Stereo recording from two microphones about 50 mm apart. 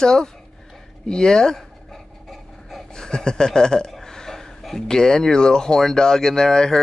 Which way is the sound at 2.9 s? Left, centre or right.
Centre.